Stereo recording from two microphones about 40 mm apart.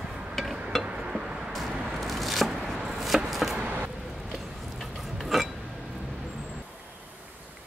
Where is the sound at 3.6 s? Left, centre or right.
Right.